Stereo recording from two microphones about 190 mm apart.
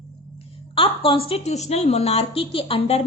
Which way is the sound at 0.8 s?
30° left (ahead or behind).